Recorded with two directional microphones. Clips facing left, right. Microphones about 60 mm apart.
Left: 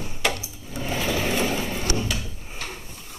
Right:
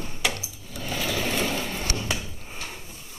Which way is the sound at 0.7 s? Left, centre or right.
Left.